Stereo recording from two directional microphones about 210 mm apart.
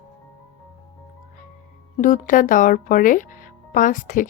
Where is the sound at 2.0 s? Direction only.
40° left (ahead or behind).